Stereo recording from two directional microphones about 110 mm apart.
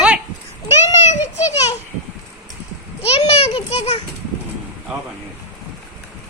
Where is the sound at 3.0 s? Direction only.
70° left (ahead or behind).